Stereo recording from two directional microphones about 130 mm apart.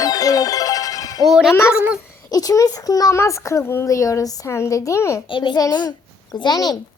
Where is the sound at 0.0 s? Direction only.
30° left (ahead or behind).